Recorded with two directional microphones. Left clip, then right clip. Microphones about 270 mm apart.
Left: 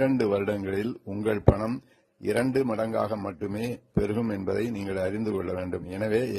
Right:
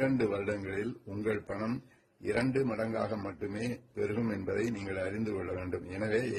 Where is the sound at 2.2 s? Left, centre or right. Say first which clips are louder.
Left 6 dB; left.